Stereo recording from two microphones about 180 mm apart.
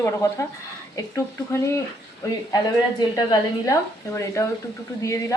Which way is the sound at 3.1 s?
20° left (ahead or behind).